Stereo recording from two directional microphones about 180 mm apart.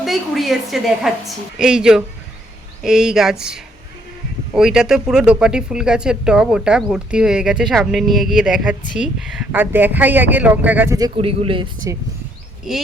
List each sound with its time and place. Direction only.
0.0 s speech: centre (ahead or behind); by 11.1 s 15° right (ahead or behind)
11.2 s a man's voice: 30° right (ahead or behind)